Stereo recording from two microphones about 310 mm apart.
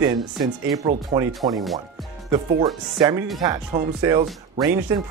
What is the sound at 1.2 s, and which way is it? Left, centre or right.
Speech, centre.